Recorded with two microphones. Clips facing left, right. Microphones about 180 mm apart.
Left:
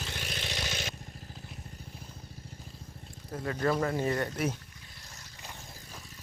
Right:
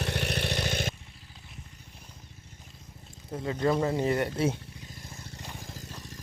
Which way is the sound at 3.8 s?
20° right (ahead or behind).